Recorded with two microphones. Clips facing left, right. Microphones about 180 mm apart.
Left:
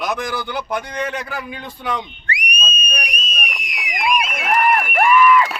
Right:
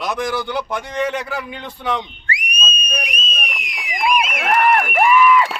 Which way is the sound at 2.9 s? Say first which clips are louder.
Right 2 dB; 25° right (ahead or behind).